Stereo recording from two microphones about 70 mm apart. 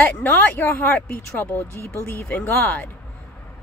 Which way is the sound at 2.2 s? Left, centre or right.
Left.